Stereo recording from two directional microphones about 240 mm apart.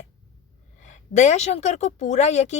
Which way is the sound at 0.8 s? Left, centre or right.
Left.